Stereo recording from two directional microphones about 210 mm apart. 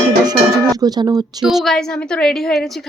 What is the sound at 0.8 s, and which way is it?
Speech, 20° right (ahead or behind).